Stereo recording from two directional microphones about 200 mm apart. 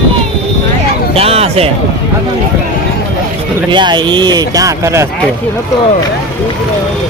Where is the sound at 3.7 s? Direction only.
20° right (ahead or behind).